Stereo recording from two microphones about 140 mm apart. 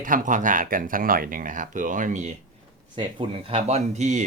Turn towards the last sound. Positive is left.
turn(degrees=-55)  # may be behind; listen again after turning